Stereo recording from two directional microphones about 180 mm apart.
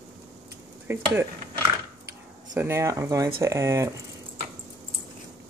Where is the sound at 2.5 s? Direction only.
15° right (ahead or behind).